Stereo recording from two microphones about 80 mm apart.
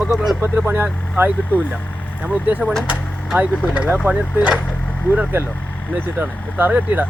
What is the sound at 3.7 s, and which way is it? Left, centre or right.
Speech, centre.